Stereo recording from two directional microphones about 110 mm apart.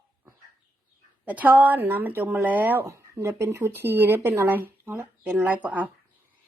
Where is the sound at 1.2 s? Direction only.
15° right (ahead or behind).